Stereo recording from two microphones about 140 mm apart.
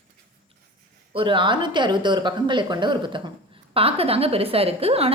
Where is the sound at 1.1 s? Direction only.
35° right (ahead or behind).